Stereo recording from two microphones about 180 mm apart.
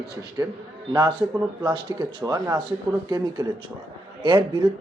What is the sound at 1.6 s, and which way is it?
Speech, 20° right (ahead or behind).